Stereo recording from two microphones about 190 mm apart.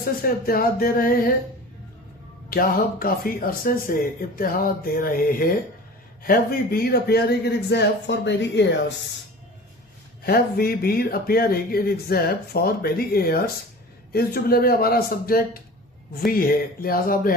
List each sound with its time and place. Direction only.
0.0 s speech: 50° left (ahead or behind)
2.5 s a man's voice: 50° left (ahead or behind); by 8.6 s 65° left (ahead or behind)
10.2 s speech: 55° left (ahead or behind)